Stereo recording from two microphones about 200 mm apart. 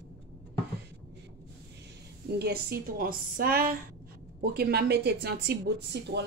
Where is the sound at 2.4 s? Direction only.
50° right (ahead or behind).